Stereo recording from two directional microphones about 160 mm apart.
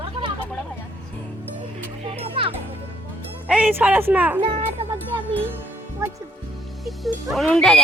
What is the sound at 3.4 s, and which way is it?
Speech, 5° right (ahead or behind).